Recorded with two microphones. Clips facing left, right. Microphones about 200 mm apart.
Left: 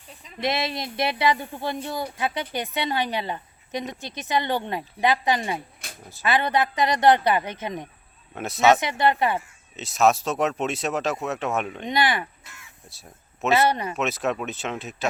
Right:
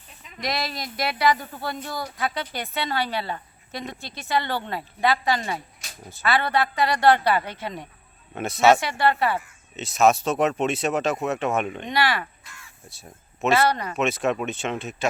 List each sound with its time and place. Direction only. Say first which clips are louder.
0.2 s a woman's voice: left 3 dB; 30° left (ahead or behind)
5.8 s a sound: left 3 dB; 55° left (ahead or behind)
6.2 s speech: even; 20° left (ahead or behind)
8.4 s speech: right 2 dB; centre (ahead or behind)
8.8 s speech: even; 20° left (ahead or behind)
9.7 s speech: right 1 dB; centre (ahead or behind)
11.9 s speech: left 3 dB; 20° left (ahead or behind)
12.9 s speech: right 2 dB; centre (ahead or behind)
13.5 s a woman's voice: even; 15° left (ahead or behind)
13.9 s speech: right 2 dB; centre (ahead or behind)